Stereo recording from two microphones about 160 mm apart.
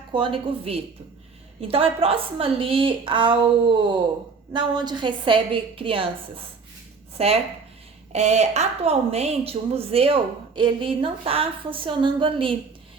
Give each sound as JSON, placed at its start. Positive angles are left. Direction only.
{"t": 0.1, "sound": "a woman's voice", "side_deg": -30}